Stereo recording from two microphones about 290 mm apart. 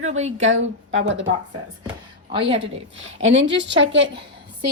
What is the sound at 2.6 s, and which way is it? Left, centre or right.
A woman's voice, right.